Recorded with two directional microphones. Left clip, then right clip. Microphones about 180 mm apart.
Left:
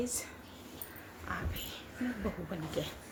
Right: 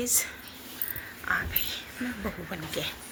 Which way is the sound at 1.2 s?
Centre (ahead or behind).